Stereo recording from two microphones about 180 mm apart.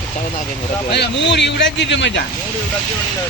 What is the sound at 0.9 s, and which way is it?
Speech, 75° left (ahead or behind).